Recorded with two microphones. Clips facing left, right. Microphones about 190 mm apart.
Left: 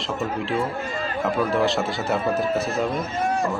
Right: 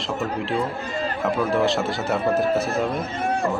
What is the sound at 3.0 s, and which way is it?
Speech, 60° right (ahead or behind).